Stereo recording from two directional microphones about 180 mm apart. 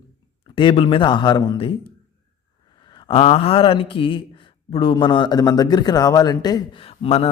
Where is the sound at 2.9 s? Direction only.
30° left (ahead or behind).